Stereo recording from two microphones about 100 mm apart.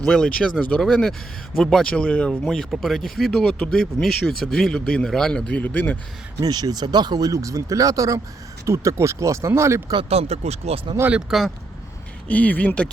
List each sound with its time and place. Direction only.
0.0 s speech: 5° left (ahead or behind)
6.4 s speech: 40° right (ahead or behind)
10.1 s speech: 90° right
11.3 s speech: centre (ahead or behind)
12.3 s speech: 15° left (ahead or behind)